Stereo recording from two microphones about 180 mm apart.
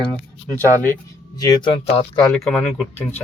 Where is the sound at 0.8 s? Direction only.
15° left (ahead or behind).